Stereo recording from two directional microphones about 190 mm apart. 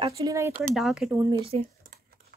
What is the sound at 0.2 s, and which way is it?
Speech, 15° right (ahead or behind).